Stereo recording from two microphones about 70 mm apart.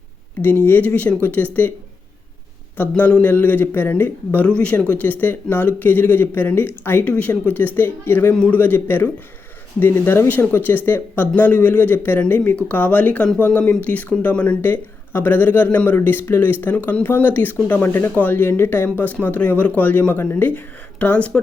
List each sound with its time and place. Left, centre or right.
0.4 s speech: left
2.9 s speech: centre
4.4 s speech: centre
7.0 s speech: centre